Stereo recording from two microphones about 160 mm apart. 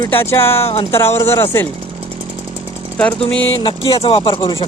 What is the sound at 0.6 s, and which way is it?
Speech, 40° left (ahead or behind).